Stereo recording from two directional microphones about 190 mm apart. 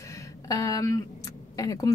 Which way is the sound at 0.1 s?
20° left (ahead or behind).